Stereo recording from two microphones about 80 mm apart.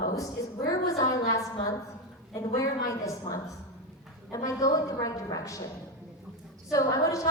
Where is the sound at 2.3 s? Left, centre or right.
Left.